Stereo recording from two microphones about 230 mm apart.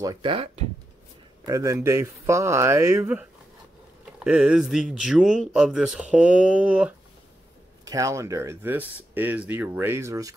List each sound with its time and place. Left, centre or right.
0.0 s speech: centre